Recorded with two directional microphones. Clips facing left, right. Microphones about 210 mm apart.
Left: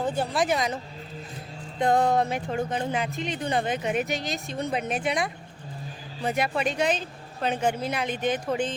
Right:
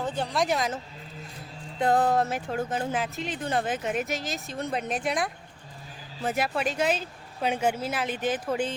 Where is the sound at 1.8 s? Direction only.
5° right (ahead or behind).